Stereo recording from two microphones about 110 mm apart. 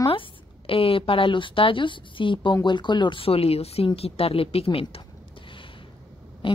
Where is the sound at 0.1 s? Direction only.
55° left (ahead or behind).